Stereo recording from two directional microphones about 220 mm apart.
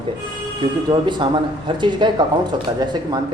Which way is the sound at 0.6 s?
20° right (ahead or behind).